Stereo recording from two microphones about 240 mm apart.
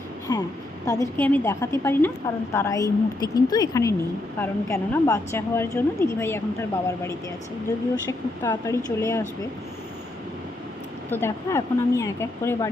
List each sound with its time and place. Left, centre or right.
0.3 s a woman's voice: centre
8.4 s a woman's voice: centre
11.1 s a woman's voice: centre